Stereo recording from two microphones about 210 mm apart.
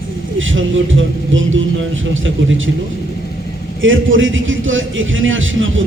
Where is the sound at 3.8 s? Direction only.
65° right (ahead or behind).